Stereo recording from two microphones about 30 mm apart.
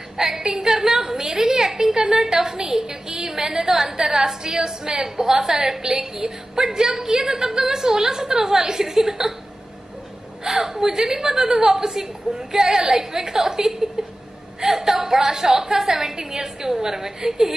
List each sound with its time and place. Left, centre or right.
0.2 s a woman's voice: centre
10.4 s a woman's voice: centre